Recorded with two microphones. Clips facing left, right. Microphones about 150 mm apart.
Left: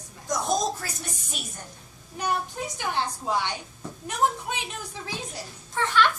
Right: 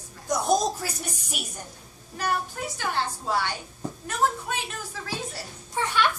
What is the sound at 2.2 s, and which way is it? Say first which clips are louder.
A woman's voice: even; 15° left (ahead or behind).